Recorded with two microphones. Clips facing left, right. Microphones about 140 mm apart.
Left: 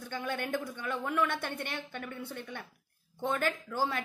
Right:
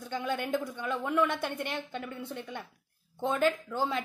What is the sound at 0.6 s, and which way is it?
Speech, 10° right (ahead or behind).